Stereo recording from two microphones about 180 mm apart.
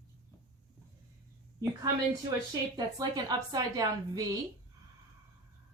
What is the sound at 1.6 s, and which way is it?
A woman's voice, 20° right (ahead or behind).